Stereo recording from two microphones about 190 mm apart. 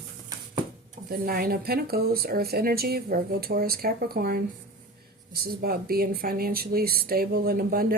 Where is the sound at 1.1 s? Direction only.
50° right (ahead or behind).